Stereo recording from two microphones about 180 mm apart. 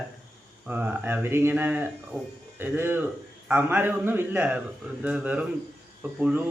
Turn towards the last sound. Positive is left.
turn(degrees=-10)  # may be behind; listen again after turning